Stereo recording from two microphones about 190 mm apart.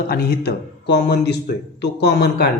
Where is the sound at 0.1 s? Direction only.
55° left (ahead or behind).